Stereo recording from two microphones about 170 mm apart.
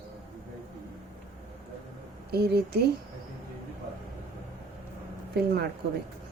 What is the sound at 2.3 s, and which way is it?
Speech, 65° right (ahead or behind).